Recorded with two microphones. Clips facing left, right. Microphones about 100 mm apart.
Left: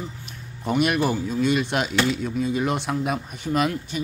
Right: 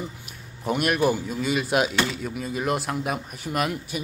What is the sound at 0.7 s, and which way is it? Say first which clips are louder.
A man's voice: left 1 dB; centre (ahead or behind).